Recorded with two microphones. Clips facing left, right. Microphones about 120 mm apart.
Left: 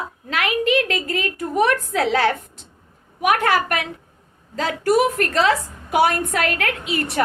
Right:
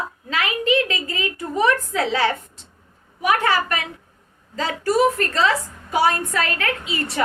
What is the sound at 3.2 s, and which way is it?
A woman's voice, 60° left (ahead or behind).